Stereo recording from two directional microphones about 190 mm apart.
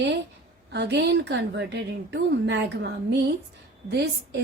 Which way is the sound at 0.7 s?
65° right (ahead or behind).